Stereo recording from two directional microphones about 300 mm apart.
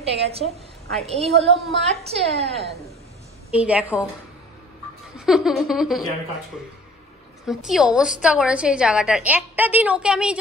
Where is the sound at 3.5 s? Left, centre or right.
Centre.